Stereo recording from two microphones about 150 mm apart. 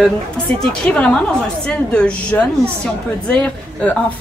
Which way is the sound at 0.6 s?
10° left (ahead or behind).